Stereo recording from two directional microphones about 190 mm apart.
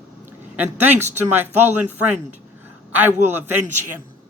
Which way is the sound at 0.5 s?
10° right (ahead or behind).